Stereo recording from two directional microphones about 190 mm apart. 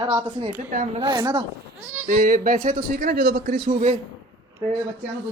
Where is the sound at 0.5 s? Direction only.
40° right (ahead or behind).